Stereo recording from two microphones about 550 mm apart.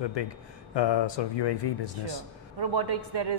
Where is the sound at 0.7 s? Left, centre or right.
Left.